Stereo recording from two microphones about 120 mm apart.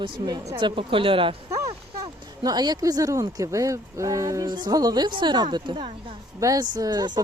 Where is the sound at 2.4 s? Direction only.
35° right (ahead or behind).